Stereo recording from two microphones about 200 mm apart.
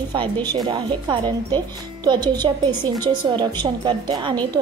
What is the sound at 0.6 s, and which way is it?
A woman's voice, 20° right (ahead or behind).